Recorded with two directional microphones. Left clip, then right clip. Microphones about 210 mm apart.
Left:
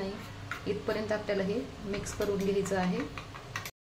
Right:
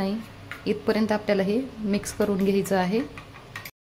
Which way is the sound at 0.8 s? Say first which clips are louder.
Right 9 dB; 55° right (ahead or behind).